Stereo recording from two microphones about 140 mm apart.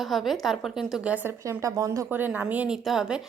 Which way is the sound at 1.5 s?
25° right (ahead or behind).